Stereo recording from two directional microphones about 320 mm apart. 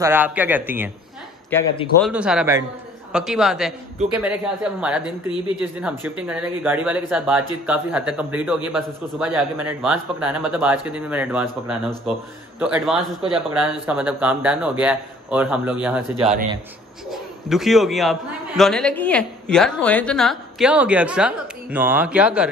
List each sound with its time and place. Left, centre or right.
0.0 s a woman's voice: centre
1.5 s a woman's voice: centre
16.2 s a man's voice: centre
17.1 s a man's voice: centre